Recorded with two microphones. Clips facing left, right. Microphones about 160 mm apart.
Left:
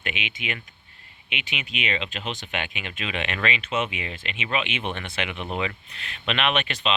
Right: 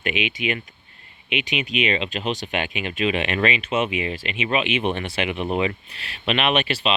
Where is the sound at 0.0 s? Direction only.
25° left (ahead or behind).